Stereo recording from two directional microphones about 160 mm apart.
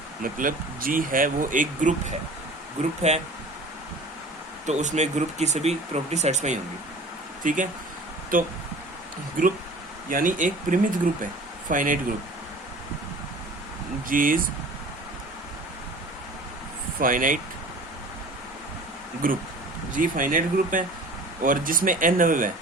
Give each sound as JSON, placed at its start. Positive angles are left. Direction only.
{"t": 0.2, "sound": "speech", "side_deg": -60}
{"t": 4.6, "sound": "speech", "side_deg": -45}
{"t": 10.1, "sound": "speech", "side_deg": -55}
{"t": 14.1, "sound": "speech", "side_deg": -60}
{"t": 17.0, "sound": "speech", "side_deg": -60}
{"t": 19.2, "sound": "speech", "side_deg": -60}